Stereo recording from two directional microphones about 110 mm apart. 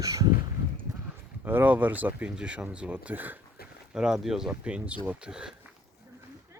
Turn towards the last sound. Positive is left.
turn(degrees=-10)  # may be behind; listen again after turning